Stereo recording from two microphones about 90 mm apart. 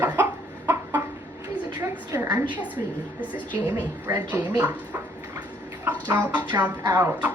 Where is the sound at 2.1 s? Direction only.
35° right (ahead or behind).